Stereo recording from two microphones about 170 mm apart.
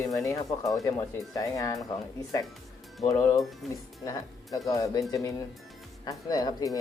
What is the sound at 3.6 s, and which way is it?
Speech, centre (ahead or behind).